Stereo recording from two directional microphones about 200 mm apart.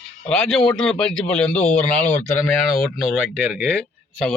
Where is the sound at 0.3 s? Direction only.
5° left (ahead or behind).